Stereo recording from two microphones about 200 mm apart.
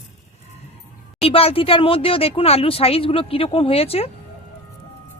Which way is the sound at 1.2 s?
30° left (ahead or behind).